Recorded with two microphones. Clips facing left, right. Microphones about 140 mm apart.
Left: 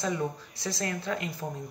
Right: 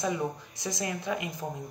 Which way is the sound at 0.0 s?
15° right (ahead or behind).